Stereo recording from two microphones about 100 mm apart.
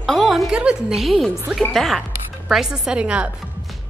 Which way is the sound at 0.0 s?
Centre (ahead or behind).